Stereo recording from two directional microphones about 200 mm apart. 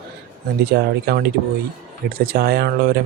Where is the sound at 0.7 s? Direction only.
55° right (ahead or behind).